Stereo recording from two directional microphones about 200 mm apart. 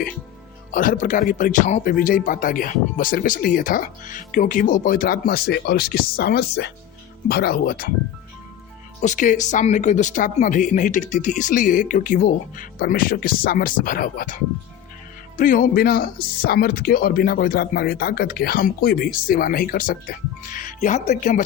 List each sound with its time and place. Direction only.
0.7 s speech: 40° left (ahead or behind)
9.0 s speech: 40° left (ahead or behind)
15.4 s speech: 40° left (ahead or behind)